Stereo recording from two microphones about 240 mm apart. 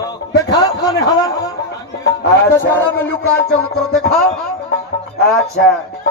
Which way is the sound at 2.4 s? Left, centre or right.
Centre.